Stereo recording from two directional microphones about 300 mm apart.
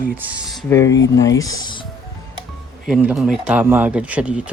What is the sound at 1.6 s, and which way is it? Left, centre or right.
Music, centre.